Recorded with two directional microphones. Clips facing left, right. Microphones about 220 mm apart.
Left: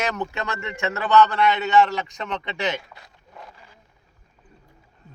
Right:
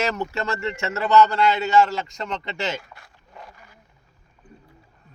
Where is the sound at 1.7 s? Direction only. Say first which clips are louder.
Even; 15° left (ahead or behind).